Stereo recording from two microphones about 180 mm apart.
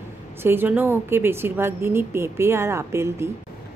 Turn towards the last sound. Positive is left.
turn(degrees=-15)  # may be behind; listen again after turning